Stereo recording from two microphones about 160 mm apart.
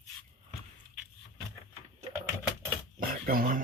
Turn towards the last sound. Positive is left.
turn(degrees=-60)  # may be behind; listen again after turning